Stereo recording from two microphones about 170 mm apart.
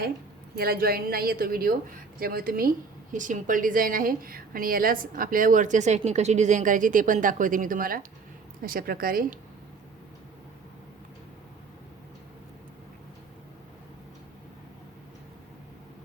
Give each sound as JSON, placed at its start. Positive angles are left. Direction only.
{"t": 0.5, "sound": "a woman's voice", "side_deg": -65}